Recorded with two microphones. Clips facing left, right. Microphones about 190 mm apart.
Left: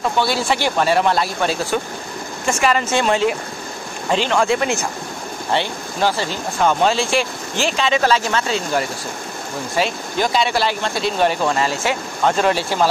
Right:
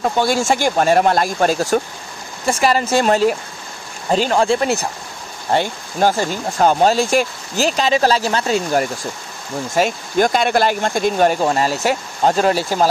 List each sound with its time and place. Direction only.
0.2 s speech: 45° right (ahead or behind)